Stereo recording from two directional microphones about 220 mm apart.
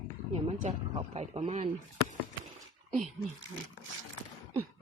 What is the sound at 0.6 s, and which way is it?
Speech, 30° right (ahead or behind).